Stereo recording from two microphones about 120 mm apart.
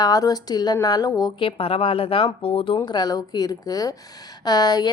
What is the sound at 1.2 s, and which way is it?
A woman's voice, 45° left (ahead or behind).